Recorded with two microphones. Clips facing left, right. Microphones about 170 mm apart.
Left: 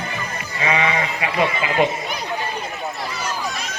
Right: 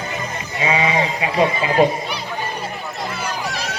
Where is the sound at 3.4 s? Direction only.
70° right (ahead or behind).